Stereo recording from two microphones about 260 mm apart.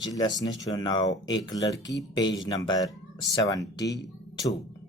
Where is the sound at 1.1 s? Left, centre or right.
Left.